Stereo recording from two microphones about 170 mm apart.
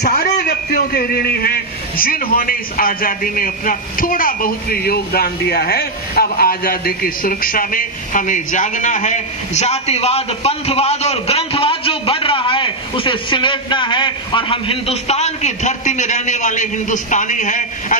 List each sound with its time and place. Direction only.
0.0 s a man's voice: 65° left (ahead or behind); by 17.9 s 50° left (ahead or behind)